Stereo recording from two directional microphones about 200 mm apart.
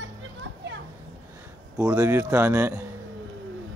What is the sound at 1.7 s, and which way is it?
Speech, 15° right (ahead or behind).